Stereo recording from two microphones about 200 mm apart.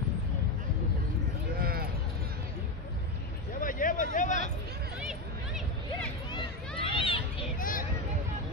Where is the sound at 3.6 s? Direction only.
45° left (ahead or behind).